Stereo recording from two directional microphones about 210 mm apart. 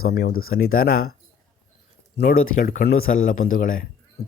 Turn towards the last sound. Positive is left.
turn(degrees=40)  # may be behind; listen again after turning